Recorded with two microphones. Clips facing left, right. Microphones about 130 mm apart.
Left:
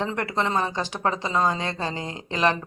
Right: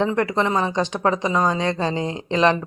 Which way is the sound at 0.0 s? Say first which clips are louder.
Right 6 dB; 15° right (ahead or behind).